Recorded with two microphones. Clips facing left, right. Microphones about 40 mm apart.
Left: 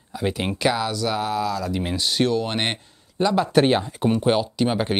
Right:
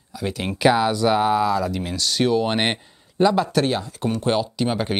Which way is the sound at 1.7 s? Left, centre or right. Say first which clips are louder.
Left 1 dB; centre.